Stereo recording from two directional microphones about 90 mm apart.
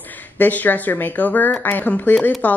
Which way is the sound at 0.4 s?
20° left (ahead or behind).